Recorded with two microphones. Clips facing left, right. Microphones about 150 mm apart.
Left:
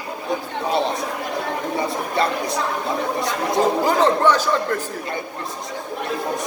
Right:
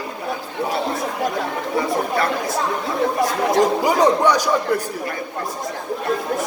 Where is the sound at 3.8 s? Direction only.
10° right (ahead or behind).